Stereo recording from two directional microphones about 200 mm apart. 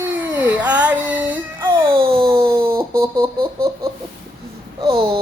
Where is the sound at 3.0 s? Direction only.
15° right (ahead or behind).